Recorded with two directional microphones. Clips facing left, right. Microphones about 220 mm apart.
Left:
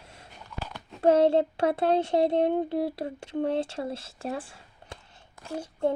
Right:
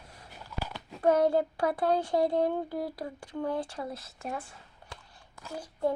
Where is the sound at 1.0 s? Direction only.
25° left (ahead or behind).